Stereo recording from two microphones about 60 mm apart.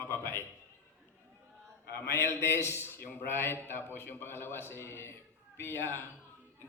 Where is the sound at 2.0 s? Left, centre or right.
Left.